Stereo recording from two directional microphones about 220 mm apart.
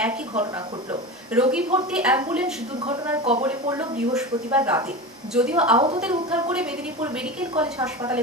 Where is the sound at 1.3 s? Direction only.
5° right (ahead or behind).